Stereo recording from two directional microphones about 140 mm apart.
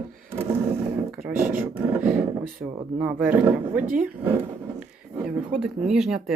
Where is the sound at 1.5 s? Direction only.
10° right (ahead or behind).